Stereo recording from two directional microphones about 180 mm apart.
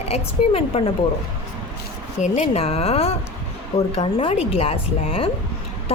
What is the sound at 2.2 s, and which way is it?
A woman's voice, 40° left (ahead or behind).